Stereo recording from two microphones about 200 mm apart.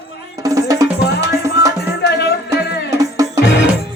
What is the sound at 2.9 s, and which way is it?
Music, 15° right (ahead or behind).